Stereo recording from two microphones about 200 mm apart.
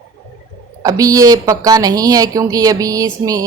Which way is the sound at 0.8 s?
15° right (ahead or behind).